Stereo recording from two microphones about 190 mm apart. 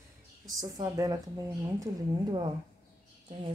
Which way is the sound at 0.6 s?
20° right (ahead or behind).